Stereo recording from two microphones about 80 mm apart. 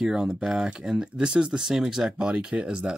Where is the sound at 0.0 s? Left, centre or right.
Centre.